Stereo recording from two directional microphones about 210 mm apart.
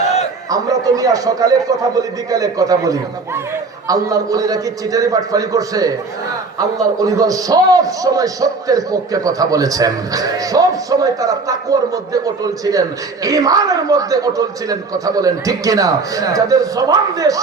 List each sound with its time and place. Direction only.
0.5 s a man's voice: 15° right (ahead or behind)